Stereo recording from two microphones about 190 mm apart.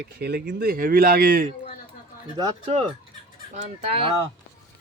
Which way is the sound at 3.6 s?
30° right (ahead or behind).